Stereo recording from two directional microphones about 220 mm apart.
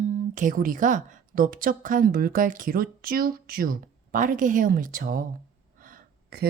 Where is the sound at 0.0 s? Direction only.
35° right (ahead or behind).